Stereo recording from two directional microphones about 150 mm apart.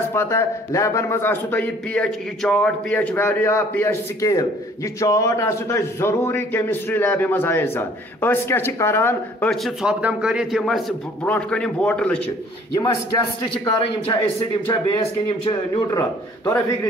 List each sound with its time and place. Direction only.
0.1 s a man's voice: 15° left (ahead or behind)
9.5 s a man's voice: centre (ahead or behind)
12.7 s a man's voice: 25° left (ahead or behind)
13.7 s a man's voice: 40° left (ahead or behind)
15.9 s a man's voice: 20° left (ahead or behind)